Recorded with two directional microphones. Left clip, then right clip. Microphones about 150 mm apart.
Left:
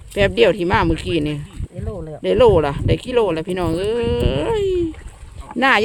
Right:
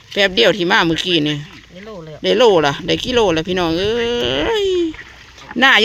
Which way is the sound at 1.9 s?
75° left (ahead or behind).